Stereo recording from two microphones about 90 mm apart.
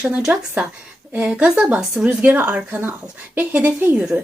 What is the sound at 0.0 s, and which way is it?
A woman's voice, 10° right (ahead or behind).